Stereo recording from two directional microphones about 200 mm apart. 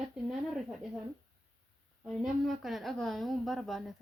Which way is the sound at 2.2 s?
Centre (ahead or behind).